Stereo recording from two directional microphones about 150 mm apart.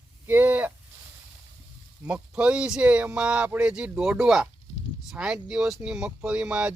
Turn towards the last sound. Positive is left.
turn(degrees=-5)  # may be behind; listen again after turning